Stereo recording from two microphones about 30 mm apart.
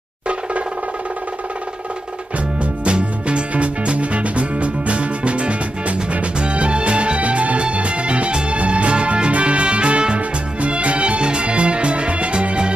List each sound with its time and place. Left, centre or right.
2.6 s music: right